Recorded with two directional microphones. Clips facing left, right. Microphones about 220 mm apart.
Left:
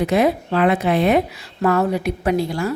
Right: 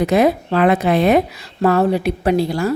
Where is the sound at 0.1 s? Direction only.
45° right (ahead or behind).